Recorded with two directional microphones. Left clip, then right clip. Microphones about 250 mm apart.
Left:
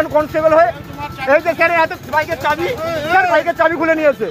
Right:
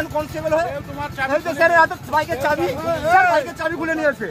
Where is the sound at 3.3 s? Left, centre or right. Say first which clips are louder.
Left 6 dB; centre.